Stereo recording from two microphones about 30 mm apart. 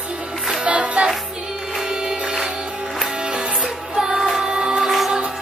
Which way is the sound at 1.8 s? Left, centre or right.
Centre.